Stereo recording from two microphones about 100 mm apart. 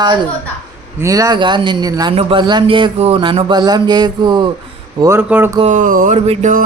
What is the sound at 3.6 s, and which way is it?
Mantra, 45° right (ahead or behind).